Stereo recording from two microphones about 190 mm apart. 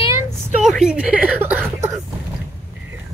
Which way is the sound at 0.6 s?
5° right (ahead or behind).